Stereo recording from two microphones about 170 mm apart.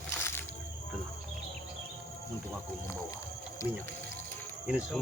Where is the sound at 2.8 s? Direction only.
15° left (ahead or behind).